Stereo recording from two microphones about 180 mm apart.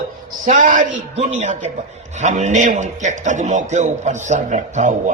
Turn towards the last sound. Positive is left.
turn(degrees=-45)  # may be behind; listen again after turning